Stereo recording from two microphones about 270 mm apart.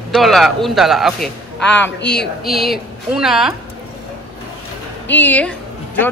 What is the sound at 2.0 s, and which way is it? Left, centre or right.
Speech, left.